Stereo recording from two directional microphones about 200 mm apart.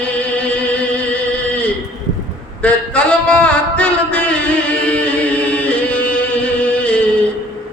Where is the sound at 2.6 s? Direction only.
5° left (ahead or behind).